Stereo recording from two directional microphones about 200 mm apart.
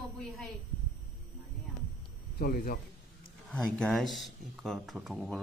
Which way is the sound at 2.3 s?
50° left (ahead or behind).